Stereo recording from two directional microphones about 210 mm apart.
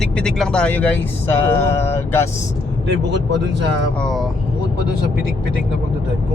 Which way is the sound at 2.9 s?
55° right (ahead or behind).